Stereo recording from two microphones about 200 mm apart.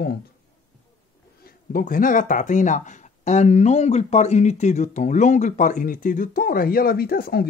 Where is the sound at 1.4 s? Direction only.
45° left (ahead or behind).